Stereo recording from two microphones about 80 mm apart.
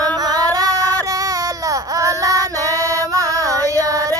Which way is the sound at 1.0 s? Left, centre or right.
Right.